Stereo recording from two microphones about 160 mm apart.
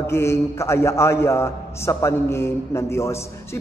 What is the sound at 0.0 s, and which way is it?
A man's voice, 15° left (ahead or behind).